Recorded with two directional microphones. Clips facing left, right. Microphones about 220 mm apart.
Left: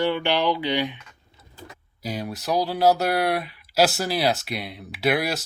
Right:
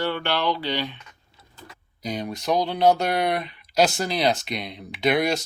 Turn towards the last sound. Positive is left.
turn(degrees=5)  # may be behind; listen again after turning